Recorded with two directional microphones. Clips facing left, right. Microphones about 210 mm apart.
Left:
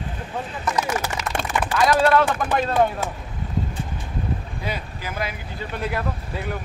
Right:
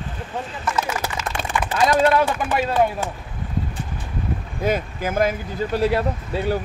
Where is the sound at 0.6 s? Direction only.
15° left (ahead or behind).